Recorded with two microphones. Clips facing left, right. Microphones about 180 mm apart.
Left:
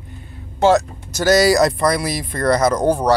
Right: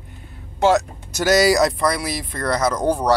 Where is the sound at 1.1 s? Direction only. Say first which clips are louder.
Left 2 dB; 10° right (ahead or behind); by 3.1 s 5° left (ahead or behind).